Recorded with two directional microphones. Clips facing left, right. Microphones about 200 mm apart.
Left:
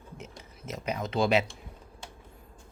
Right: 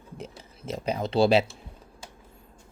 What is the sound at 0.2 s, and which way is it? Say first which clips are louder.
Speech: right 4 dB; 30° right (ahead or behind).